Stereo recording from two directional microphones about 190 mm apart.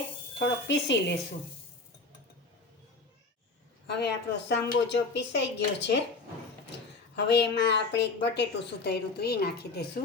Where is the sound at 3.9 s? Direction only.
60° left (ahead or behind).